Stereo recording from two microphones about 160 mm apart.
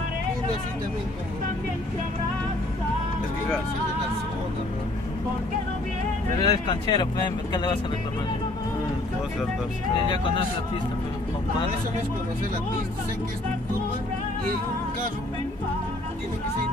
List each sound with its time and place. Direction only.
6.4 s speech: 25° left (ahead or behind)
10.0 s speech: 30° left (ahead or behind)